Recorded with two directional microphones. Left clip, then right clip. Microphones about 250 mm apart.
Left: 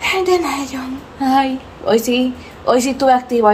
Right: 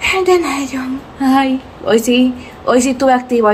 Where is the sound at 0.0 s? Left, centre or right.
Centre.